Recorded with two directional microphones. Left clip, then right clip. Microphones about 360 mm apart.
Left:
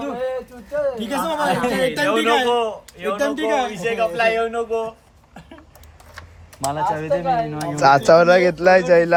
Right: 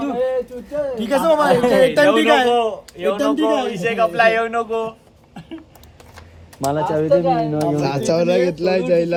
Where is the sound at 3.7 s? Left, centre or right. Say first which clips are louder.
Right 3 dB; centre.